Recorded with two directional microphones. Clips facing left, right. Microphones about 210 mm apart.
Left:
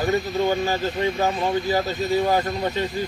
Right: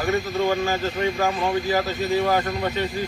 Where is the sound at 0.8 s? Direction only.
20° left (ahead or behind).